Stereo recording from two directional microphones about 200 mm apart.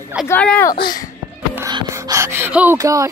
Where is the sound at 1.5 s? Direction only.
15° right (ahead or behind).